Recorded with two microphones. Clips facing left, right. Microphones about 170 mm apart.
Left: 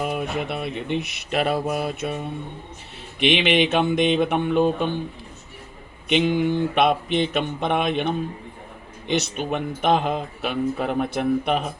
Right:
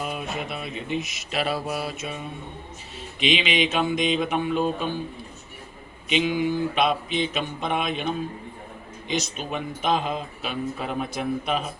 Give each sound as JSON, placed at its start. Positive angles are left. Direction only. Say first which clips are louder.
{"t": 0.0, "sound": "mantra", "louder": "left 5 dB", "side_deg": 55}
{"t": 3.2, "sound": "speech", "louder": "left 4 dB", "side_deg": 60}
{"t": 6.1, "sound": "speech", "louder": "left 3 dB", "side_deg": 55}